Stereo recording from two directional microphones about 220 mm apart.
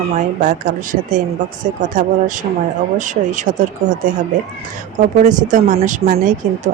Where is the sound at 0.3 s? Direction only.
35° right (ahead or behind).